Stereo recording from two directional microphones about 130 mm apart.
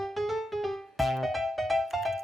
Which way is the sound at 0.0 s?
Centre (ahead or behind).